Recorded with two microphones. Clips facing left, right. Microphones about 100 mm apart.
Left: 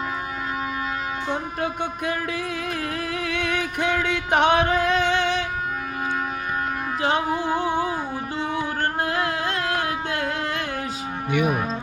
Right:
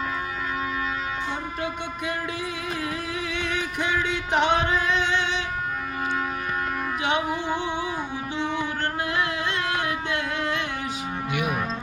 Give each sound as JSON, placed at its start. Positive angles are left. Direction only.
{"t": 1.6, "sound": "music", "side_deg": 45}
{"t": 7.0, "sound": "music", "side_deg": 35}